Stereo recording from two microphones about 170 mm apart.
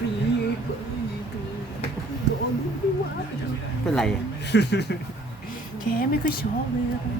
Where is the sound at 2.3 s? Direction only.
80° left.